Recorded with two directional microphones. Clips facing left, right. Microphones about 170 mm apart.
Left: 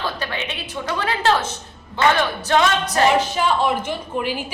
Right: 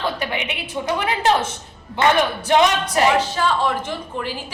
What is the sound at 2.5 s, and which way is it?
Speech, 20° right (ahead or behind).